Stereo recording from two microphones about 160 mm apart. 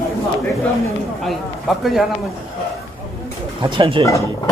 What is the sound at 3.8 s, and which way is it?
Speech, 35° right (ahead or behind).